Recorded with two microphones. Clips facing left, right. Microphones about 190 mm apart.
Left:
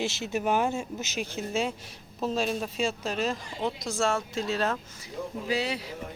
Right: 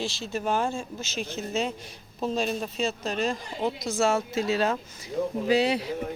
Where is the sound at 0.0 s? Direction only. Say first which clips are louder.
Left 1 dB; 20° left (ahead or behind); by 4.8 s centre (ahead or behind).